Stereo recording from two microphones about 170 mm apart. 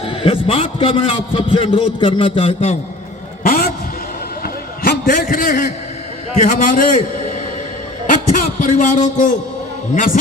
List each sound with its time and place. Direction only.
0.0 s a man's voice: 35° left (ahead or behind)
3.4 s vehicle: 55° left (ahead or behind)
4.8 s a man's voice: 55° left (ahead or behind)